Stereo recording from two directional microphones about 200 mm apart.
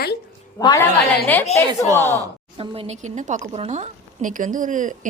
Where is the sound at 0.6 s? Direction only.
20° left (ahead or behind).